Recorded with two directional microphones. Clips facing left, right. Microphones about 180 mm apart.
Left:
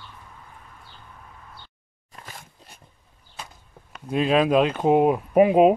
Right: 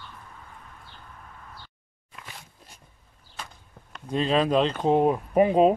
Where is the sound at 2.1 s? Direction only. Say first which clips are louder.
Left 2 dB; 45° left (ahead or behind).